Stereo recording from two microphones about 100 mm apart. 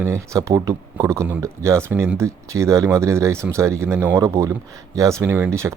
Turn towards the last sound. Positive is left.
turn(degrees=-25)  # may be behind; listen again after turning